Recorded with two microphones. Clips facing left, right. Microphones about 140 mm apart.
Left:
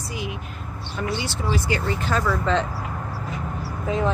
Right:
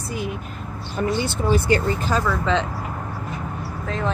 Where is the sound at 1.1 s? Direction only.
50° right (ahead or behind).